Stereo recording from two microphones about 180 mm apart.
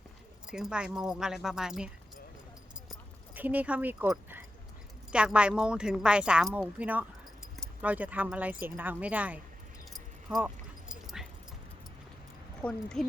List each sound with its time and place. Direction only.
0.4 s speech: 5° right (ahead or behind)
3.3 s speech: 10° right (ahead or behind)
10.2 s dog: 5° right (ahead or behind)
12.6 s speech: 5° left (ahead or behind)